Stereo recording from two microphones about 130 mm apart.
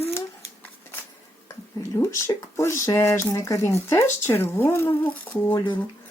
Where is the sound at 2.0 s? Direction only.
20° left (ahead or behind).